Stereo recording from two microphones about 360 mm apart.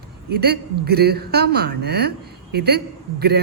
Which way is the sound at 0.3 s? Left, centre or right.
Right.